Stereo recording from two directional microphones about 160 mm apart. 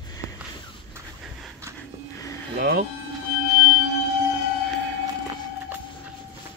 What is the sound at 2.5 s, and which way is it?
Speech, 75° right (ahead or behind).